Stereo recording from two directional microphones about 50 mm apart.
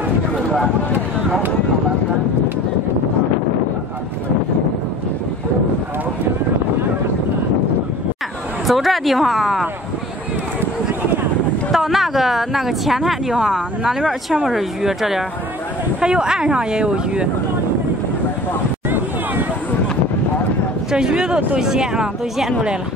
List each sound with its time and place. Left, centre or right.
8.6 s speech: centre
11.7 s speech: centre
20.9 s speech: centre